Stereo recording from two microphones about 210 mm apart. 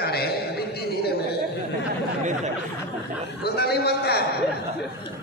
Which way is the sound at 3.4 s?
50° left (ahead or behind).